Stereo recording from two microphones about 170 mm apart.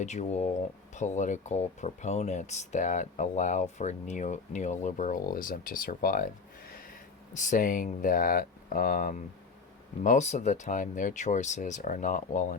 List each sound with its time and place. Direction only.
0.0 s speech: 40° left (ahead or behind)
6.7 s a sound: 60° left (ahead or behind)
7.3 s speech: 50° left (ahead or behind)